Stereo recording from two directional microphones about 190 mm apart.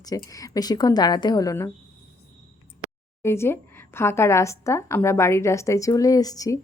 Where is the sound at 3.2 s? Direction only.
15° left (ahead or behind).